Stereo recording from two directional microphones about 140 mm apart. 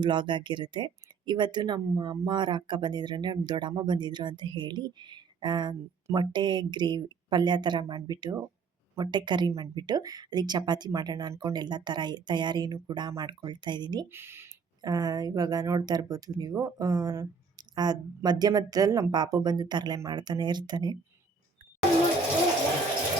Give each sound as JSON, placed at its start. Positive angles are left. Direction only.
{"t": 0.0, "sound": "speech", "side_deg": -35}
{"t": 14.1, "sound": "speech", "side_deg": -15}
{"t": 14.8, "sound": "speech", "side_deg": -30}